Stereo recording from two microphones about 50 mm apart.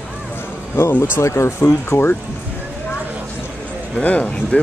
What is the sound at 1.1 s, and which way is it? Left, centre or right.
Speech, left.